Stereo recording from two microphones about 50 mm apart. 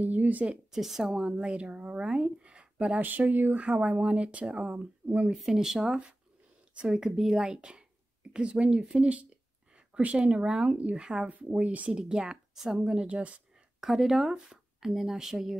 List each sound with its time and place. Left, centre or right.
0.0 s speech: right
0.7 s a woman's voice: centre; by 3.0 s right
3.0 s speech: right
3.5 s a woman's voice: right
5.5 s a woman's voice: centre
12.0 s speech: centre
13.0 s a woman's voice: right
13.7 s speech: centre